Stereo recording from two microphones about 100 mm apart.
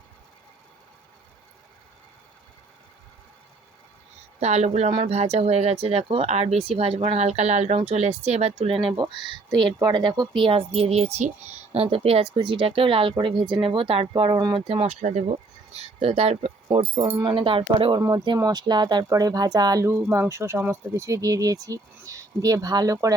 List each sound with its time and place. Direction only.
4.4 s speech: 90° right; by 9.0 s 65° right (ahead or behind)
9.7 s speech: 45° right (ahead or behind); by 11.2 s 90° right
11.7 s speech: 75° right (ahead or behind)
14.1 s speech: 50° right (ahead or behind)
14.7 s speech: 80° right
17.2 s speech: 60° right (ahead or behind)
18.0 s speech: 45° right (ahead or behind)
19.8 s speech: 25° right (ahead or behind)